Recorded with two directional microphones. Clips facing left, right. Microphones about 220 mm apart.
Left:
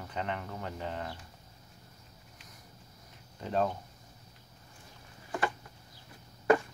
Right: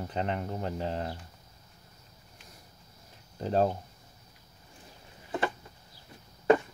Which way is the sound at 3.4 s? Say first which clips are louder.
Right 4 dB; 35° right (ahead or behind).